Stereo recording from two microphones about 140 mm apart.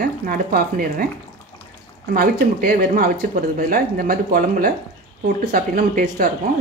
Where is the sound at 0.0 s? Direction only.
90° right.